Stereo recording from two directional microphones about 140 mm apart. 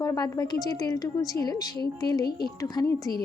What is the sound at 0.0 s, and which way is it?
A woman's voice, 25° left (ahead or behind).